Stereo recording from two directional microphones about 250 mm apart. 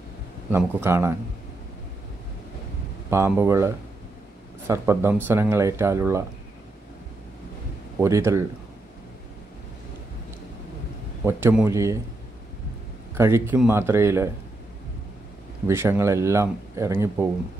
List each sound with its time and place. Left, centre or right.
0.5 s speech: centre
3.1 s speech: centre
8.0 s speech: centre
11.2 s speech: centre
13.1 s speech: centre
15.6 s speech: centre